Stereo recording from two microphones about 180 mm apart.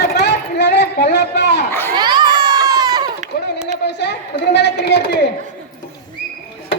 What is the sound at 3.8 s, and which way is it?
A woman's voice, 70° left (ahead or behind).